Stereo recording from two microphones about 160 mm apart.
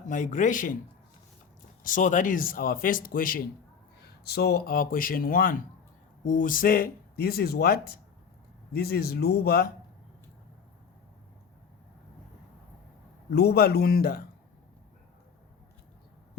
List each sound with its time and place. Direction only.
0.0 s a man's voice: 55° left (ahead or behind)
1.8 s speech: 55° left (ahead or behind)
4.2 s speech: 85° left
13.3 s speech: 80° left